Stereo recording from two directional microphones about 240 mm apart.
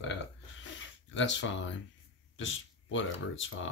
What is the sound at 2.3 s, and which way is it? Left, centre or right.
Speech, left.